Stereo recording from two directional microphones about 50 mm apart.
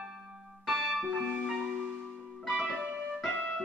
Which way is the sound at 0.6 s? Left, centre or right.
Centre.